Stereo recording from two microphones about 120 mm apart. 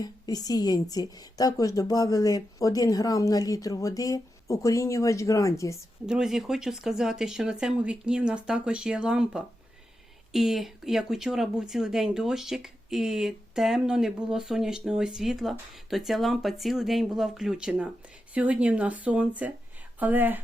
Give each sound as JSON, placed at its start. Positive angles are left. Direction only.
{"t": 0.0, "sound": "a woman's voice", "side_deg": 35}
{"t": 6.1, "sound": "speech", "side_deg": -5}